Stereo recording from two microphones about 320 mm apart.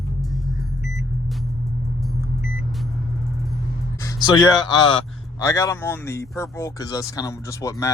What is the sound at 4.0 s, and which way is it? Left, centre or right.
Speech, centre.